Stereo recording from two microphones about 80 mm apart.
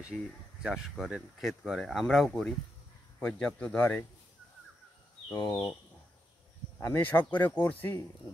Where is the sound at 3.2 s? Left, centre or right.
Centre.